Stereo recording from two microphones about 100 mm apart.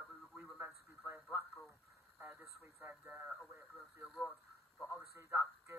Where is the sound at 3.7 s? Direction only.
Centre (ahead or behind).